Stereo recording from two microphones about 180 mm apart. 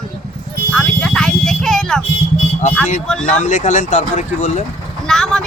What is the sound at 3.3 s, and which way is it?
Speech, 45° left (ahead or behind).